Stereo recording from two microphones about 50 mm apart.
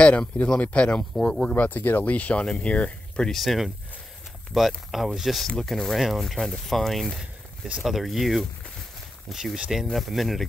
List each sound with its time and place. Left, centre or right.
0.0 s speech: left
1.1 s speech: centre
1.5 s speech: left
3.3 s speech: centre